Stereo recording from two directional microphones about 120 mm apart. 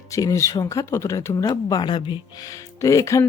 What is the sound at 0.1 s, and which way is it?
Speech, 25° left (ahead or behind).